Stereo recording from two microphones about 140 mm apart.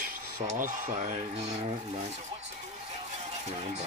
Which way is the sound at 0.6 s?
65° right (ahead or behind).